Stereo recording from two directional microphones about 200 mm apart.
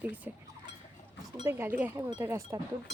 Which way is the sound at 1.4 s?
10° right (ahead or behind).